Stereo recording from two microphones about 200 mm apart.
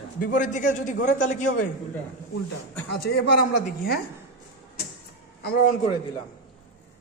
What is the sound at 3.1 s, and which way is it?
Speech, 55° left (ahead or behind).